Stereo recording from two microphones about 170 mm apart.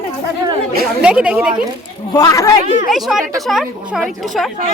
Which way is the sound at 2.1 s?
20° left (ahead or behind).